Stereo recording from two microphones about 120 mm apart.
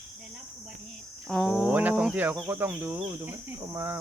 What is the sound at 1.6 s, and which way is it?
Speech, 10° right (ahead or behind).